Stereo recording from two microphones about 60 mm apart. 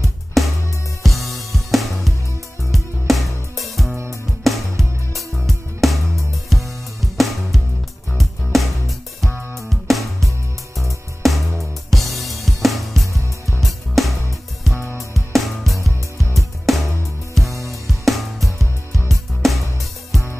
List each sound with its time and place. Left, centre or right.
0.4 s music: centre
17.5 s music: right
17.8 s music: centre